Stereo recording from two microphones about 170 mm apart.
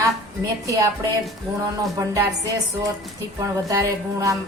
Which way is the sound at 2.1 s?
20° right (ahead or behind).